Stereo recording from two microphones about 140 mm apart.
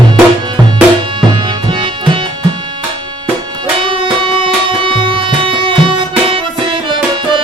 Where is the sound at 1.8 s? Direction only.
40° right (ahead or behind).